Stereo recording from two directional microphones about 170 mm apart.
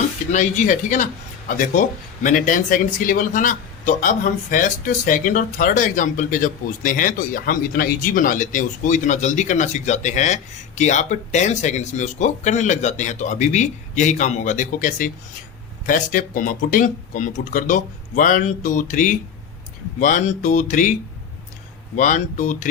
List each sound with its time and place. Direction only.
0.3 s speech: 45° left (ahead or behind)
21.9 s speech: 50° left (ahead or behind)